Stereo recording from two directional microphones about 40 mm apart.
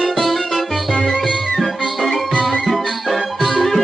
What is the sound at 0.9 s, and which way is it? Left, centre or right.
Music, centre.